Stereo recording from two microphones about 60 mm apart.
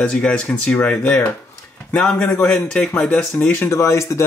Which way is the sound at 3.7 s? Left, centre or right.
Left.